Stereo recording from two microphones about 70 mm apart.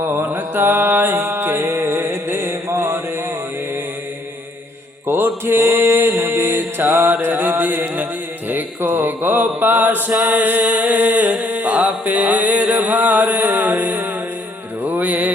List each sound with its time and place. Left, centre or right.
0.1 s mantra: right
5.0 s mantra: right
7.1 s music: right
8.4 s mantra: right
10.2 s music: centre
10.4 s a sound: right
12.0 s music: right